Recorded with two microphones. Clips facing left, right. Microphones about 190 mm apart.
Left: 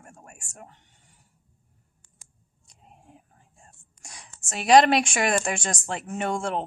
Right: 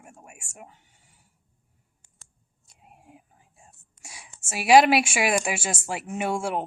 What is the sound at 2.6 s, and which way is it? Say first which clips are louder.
Speech: even; 10° right (ahead or behind).